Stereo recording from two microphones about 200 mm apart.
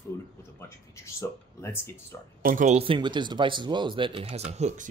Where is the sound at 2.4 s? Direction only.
40° right (ahead or behind).